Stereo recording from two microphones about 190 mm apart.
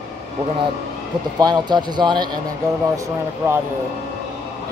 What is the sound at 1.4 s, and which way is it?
Speech, 20° right (ahead or behind).